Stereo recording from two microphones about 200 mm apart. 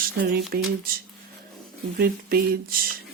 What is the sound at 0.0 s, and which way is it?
Speech, 45° right (ahead or behind).